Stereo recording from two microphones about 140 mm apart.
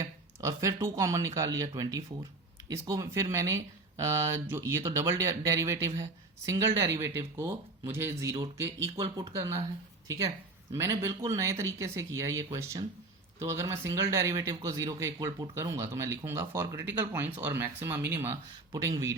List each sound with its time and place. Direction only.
0.0 s speech: 20° right (ahead or behind)
10.1 s speech: 25° right (ahead or behind)